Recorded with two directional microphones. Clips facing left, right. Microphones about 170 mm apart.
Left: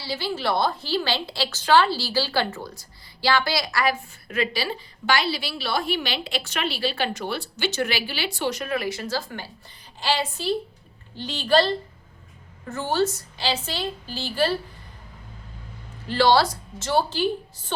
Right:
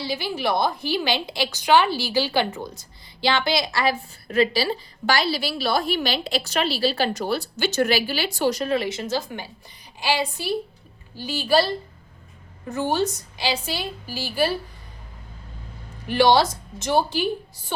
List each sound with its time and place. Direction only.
0.0 s a woman's voice: 15° right (ahead or behind)
16.0 s a woman's voice: 15° right (ahead or behind)